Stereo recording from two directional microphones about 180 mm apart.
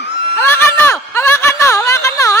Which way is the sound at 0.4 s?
10° left (ahead or behind).